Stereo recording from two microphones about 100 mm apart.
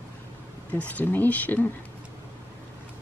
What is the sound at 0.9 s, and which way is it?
Speech, 15° left (ahead or behind).